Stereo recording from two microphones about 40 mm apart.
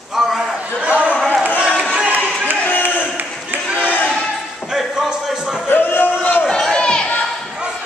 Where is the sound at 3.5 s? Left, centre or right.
Right.